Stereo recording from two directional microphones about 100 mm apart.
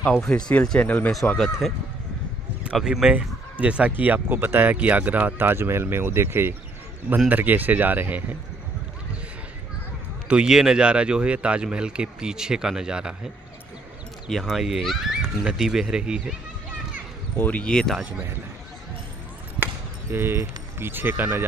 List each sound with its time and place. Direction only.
0.5 s speech: 10° left (ahead or behind)
2.6 s speech: 10° right (ahead or behind)
10.2 s speech: 10° right (ahead or behind)
14.3 s speech: centre (ahead or behind)
17.4 s speech: 15° left (ahead or behind)
19.6 s speech: 25° right (ahead or behind)